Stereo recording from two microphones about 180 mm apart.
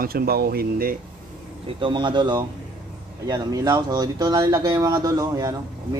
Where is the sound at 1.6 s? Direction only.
25° right (ahead or behind).